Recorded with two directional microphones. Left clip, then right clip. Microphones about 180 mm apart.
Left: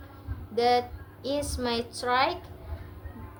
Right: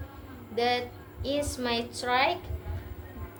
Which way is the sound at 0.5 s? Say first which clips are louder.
Left 4 dB; 15° left (ahead or behind).